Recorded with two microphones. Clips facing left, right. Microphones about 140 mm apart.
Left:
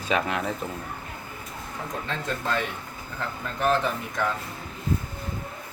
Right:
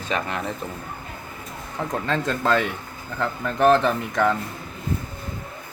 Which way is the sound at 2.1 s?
90° right.